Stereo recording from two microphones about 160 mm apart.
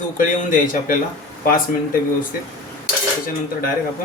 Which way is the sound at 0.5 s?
55° left (ahead or behind).